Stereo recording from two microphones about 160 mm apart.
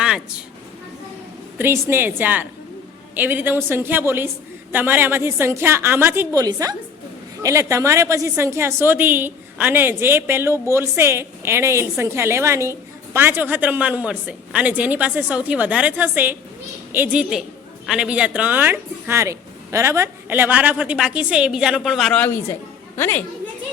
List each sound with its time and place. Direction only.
0.0 s speech: 5° right (ahead or behind)
1.5 s a woman's voice: 15° right (ahead or behind); by 22.3 s 5° left (ahead or behind)
23.0 s a woman's voice: 15° left (ahead or behind)